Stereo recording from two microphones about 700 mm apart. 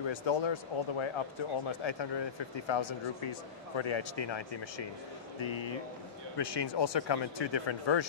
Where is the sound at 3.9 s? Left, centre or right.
Left.